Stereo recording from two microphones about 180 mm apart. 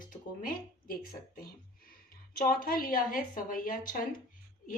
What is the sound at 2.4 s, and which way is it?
Speech, 55° left (ahead or behind).